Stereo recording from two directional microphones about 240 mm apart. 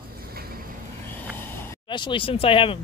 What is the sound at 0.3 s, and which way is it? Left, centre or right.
Vehicle, right.